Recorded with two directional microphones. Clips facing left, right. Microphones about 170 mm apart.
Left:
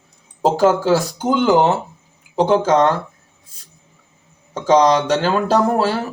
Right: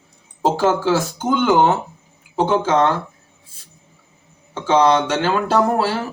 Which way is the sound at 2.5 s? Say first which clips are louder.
Left 4 dB; 40° left (ahead or behind).